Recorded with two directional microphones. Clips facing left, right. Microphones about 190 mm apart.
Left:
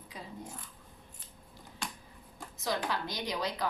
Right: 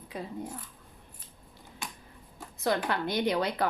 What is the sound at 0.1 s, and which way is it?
Speech, 60° right (ahead or behind).